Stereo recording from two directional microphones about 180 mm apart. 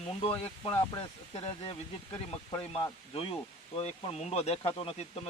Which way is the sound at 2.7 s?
30° left (ahead or behind).